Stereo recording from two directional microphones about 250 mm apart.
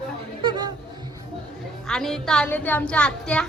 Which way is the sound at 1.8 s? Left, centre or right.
Centre.